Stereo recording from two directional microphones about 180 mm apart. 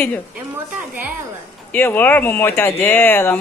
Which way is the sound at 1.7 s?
10° left (ahead or behind).